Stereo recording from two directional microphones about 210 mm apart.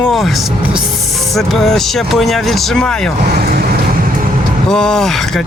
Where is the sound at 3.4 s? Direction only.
45° right (ahead or behind).